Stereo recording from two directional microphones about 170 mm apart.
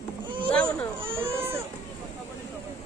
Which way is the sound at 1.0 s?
15° right (ahead or behind).